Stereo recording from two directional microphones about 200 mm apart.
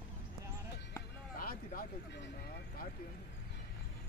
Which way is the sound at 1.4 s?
45° left (ahead or behind).